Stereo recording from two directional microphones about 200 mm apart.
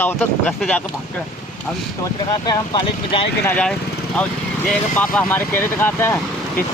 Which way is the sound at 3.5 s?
5° left (ahead or behind).